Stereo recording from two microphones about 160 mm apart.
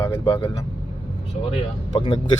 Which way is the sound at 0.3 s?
35° left (ahead or behind).